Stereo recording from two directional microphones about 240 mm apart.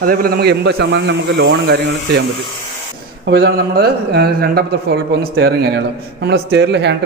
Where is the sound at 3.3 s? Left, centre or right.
Right.